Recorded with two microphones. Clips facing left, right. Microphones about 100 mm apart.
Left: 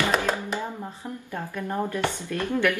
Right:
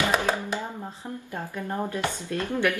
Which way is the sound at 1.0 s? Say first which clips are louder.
Even; 15° right (ahead or behind).